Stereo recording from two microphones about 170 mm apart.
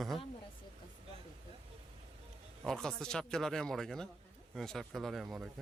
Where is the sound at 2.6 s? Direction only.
5° left (ahead or behind).